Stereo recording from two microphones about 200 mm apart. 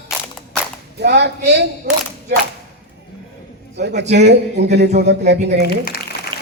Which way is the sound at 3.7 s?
60° right (ahead or behind).